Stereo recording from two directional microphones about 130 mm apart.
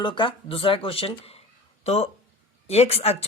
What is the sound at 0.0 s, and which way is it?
Speech, 40° left (ahead or behind).